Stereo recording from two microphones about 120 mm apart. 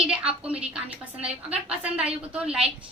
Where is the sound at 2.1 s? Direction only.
10° right (ahead or behind).